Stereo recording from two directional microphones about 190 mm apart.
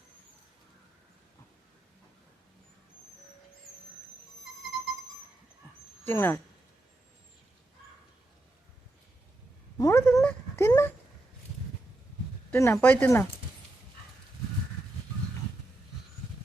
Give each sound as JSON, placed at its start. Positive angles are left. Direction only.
{"t": 6.1, "sound": "speech", "side_deg": 15}
{"t": 9.7, "sound": "cat", "side_deg": 15}
{"t": 12.5, "sound": "speech", "side_deg": 15}